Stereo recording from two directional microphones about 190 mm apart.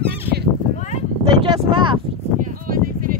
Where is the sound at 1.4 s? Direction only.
25° right (ahead or behind).